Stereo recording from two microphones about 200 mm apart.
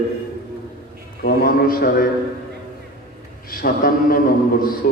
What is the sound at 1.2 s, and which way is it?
Speech, 45° left (ahead or behind).